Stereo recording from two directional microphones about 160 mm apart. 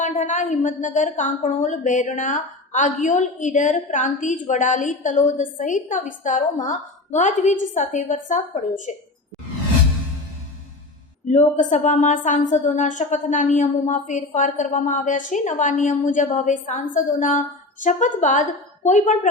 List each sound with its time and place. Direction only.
0.0 s a woman's voice: 50° left (ahead or behind)
11.3 s a woman's voice: 50° left (ahead or behind)